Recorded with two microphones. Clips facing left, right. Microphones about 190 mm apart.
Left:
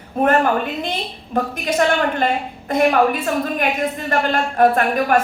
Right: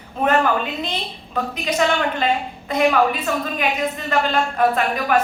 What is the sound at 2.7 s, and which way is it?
A man's voice, 50° left (ahead or behind).